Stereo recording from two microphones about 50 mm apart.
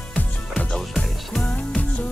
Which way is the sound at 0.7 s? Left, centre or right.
Centre.